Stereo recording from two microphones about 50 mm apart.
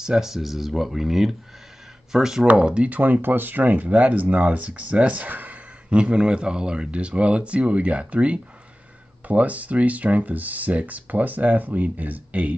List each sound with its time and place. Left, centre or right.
0.0 s speech: centre
2.5 s speech: centre
2.9 s speech: right
5.9 s speech: right